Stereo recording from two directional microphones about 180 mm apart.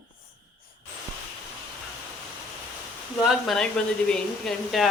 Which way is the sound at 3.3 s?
Centre (ahead or behind).